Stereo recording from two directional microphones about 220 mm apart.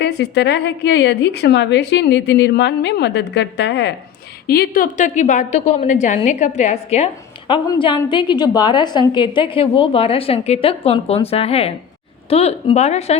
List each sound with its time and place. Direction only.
0.0 s a woman's voice: 50° left (ahead or behind); by 13.1 s 30° left (ahead or behind)